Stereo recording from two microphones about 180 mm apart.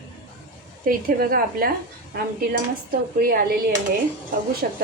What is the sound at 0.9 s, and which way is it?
Speech, 50° right (ahead or behind).